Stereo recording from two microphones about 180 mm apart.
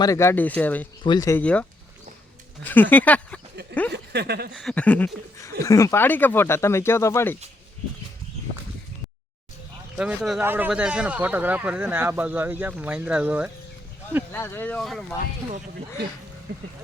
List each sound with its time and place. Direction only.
0.0 s speech: 15° left (ahead or behind)
1.0 s speech: 20° left (ahead or behind)
2.6 s speech: 10° left (ahead or behind)
3.5 s speech: 65° right (ahead or behind)
4.5 s speech: 5° left (ahead or behind)
10.0 s speech: 5° right (ahead or behind)
14.3 s speech: 10° left (ahead or behind)
16.5 s speech: 60° right (ahead or behind)